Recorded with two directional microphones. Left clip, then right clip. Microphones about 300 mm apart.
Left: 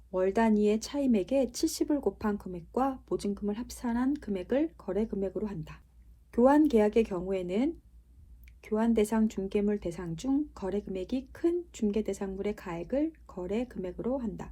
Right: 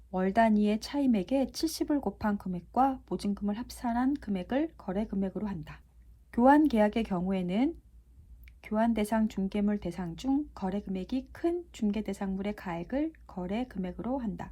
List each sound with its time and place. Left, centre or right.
0.1 s speech: right